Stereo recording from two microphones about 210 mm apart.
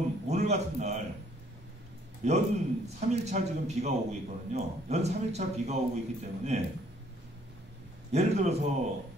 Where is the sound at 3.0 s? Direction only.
35° right (ahead or behind).